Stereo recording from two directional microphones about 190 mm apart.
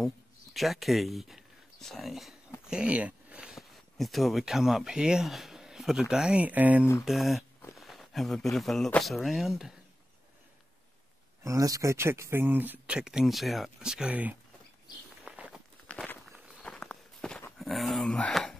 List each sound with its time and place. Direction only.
0.0 s speech: centre (ahead or behind)
11.4 s speech: 20° right (ahead or behind)
15.2 s walk: 5° right (ahead or behind)
15.9 s walk: 5° left (ahead or behind)